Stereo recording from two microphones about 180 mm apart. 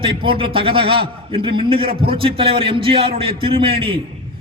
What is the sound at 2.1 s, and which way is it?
A man's voice, 30° right (ahead or behind).